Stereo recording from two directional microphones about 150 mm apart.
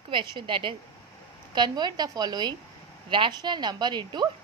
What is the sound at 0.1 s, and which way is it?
A woman's voice, 30° right (ahead or behind).